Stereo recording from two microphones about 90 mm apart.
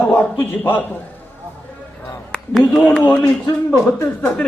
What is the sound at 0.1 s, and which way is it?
Speech, 25° left (ahead or behind).